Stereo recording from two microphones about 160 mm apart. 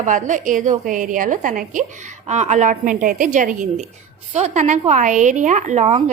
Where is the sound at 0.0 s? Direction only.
50° right (ahead or behind).